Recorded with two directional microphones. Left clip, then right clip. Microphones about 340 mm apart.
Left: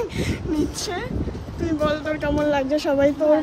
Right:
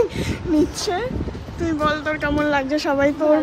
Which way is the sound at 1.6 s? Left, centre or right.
Centre.